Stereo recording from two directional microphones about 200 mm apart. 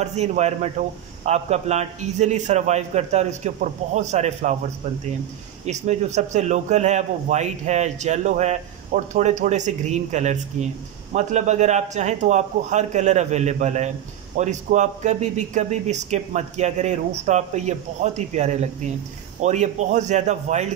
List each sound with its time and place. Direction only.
0.0 s speech: 35° right (ahead or behind)
5.7 s speech: 35° right (ahead or behind)